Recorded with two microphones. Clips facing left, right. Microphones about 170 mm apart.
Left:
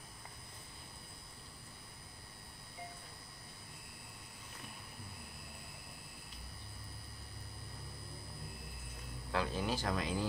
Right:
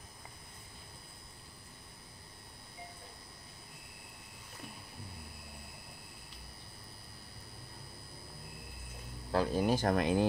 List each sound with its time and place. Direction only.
9.3 s speech: 40° right (ahead or behind); by 10.2 s 60° right (ahead or behind)